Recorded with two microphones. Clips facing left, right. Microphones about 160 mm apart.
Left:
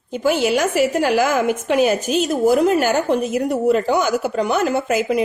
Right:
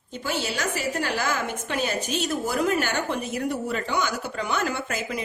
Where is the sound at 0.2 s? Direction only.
55° left (ahead or behind).